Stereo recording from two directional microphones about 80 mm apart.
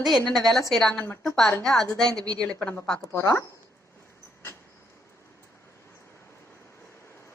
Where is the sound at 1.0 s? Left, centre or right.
Left.